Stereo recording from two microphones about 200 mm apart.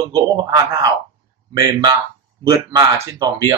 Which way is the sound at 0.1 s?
20° right (ahead or behind).